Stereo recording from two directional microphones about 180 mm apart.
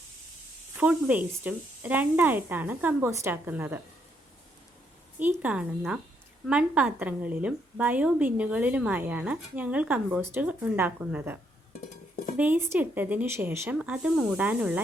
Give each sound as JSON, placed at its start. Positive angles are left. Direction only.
{"t": 0.8, "sound": "a woman's voice", "side_deg": -5}
{"t": 5.4, "sound": "a woman's voice", "side_deg": -5}
{"t": 12.4, "sound": "a woman's voice", "side_deg": -10}